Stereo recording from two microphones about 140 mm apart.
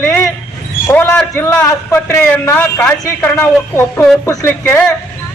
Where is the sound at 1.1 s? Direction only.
15° left (ahead or behind).